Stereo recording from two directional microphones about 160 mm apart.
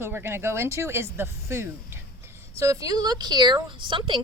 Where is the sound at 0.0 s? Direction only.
15° right (ahead or behind).